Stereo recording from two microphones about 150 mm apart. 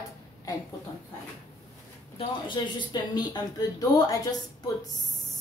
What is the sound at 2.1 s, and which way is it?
Speech, 30° left (ahead or behind).